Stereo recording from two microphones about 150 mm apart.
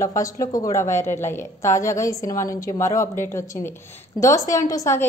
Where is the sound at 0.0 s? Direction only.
20° left (ahead or behind).